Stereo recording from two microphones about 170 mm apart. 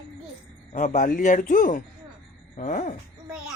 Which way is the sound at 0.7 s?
50° left (ahead or behind).